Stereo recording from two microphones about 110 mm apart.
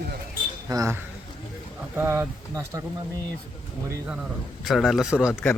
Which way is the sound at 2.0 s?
20° right (ahead or behind).